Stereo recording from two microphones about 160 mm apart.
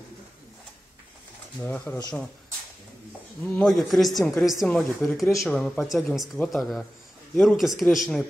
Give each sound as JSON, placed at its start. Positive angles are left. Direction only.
{"t": 1.6, "sound": "speech", "side_deg": 10}
{"t": 3.4, "sound": "speech", "side_deg": 5}